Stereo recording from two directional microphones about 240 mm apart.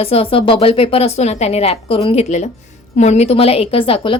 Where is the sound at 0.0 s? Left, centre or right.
Left.